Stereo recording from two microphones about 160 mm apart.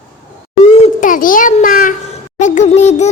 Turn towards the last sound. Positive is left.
turn(degrees=45)  # may be behind; listen again after turning